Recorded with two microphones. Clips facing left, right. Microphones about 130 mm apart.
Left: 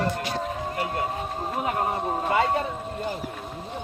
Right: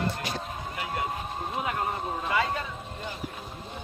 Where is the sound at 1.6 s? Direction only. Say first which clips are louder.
Left 6 dB; 35° left (ahead or behind).